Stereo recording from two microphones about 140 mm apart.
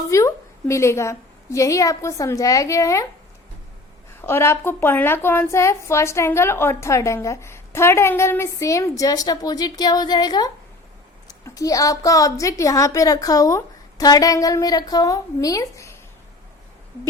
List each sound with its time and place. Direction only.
0.1 s a woman's voice: 20° left (ahead or behind)
4.2 s a woman's voice: 15° left (ahead or behind)